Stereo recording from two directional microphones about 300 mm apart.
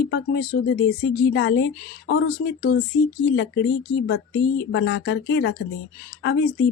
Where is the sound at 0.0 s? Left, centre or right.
Left.